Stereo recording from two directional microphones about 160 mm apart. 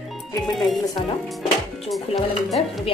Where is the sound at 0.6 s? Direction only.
Centre (ahead or behind).